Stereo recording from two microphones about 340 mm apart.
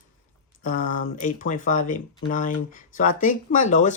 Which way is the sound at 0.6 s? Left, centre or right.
Left.